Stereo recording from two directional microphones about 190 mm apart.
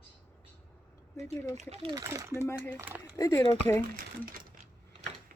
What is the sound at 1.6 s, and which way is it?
Speech, 35° right (ahead or behind).